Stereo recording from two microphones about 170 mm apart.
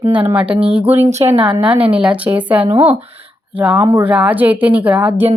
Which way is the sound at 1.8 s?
5° right (ahead or behind).